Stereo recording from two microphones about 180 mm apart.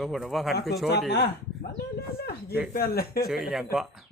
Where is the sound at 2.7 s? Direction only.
55° left (ahead or behind).